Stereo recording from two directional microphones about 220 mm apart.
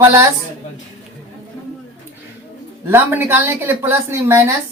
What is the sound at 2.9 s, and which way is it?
A woman's voice, 10° right (ahead or behind).